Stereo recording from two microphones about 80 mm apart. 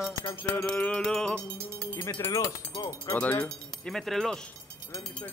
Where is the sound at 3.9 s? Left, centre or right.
Centre.